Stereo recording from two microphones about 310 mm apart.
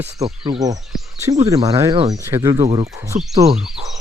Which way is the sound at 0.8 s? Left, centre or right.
Centre.